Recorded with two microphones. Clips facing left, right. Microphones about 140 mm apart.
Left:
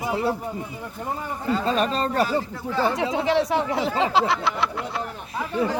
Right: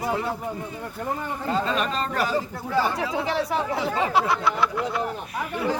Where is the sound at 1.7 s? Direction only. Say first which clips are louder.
Left 3 dB; 35° left (ahead or behind).